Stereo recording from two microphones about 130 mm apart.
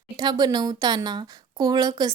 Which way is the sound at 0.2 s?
35° right (ahead or behind).